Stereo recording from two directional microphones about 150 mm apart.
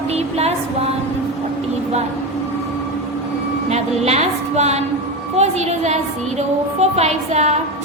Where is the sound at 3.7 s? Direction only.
45° right (ahead or behind).